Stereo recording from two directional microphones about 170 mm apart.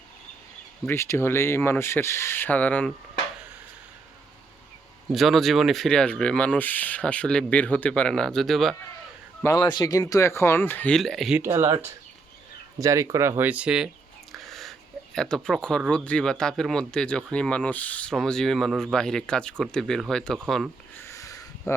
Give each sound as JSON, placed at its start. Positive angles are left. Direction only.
{"t": 0.9, "sound": "speech", "side_deg": 15}
{"t": 5.1, "sound": "speech", "side_deg": 0}
{"t": 9.4, "sound": "speech", "side_deg": 20}
{"t": 11.3, "sound": "speech", "side_deg": -15}
{"t": 14.3, "sound": "a sound", "side_deg": 0}
{"t": 15.9, "sound": "speech", "side_deg": 5}
{"t": 21.0, "sound": "sniff", "side_deg": 20}